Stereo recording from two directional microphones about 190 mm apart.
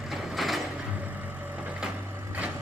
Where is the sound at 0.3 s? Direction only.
Centre (ahead or behind).